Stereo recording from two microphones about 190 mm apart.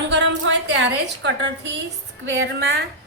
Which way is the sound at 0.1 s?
70° right (ahead or behind).